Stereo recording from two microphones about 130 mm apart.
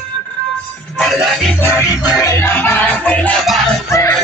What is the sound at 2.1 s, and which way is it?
Music, 25° left (ahead or behind).